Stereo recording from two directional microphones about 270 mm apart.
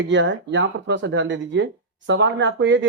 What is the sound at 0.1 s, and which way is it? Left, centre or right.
Speech, right.